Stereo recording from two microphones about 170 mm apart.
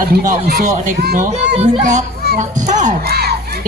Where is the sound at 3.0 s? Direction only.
70° right (ahead or behind).